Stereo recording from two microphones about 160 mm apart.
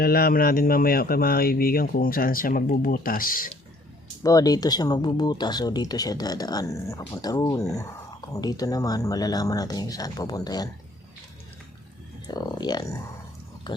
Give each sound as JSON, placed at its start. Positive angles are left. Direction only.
{"t": 0.0, "sound": "speech", "side_deg": 70}
{"t": 4.2, "sound": "speech", "side_deg": 20}
{"t": 12.3, "sound": "speech", "side_deg": 25}